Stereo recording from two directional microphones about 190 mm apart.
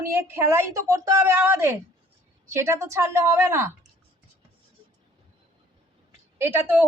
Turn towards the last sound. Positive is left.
turn(degrees=-10)  # may be behind; listen again after turning